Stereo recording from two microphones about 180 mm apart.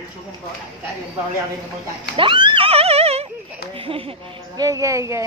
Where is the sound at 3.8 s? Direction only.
30° right (ahead or behind).